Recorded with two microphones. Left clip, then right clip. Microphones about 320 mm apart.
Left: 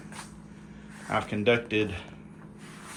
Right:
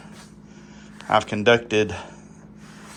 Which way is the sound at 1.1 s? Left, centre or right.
Centre.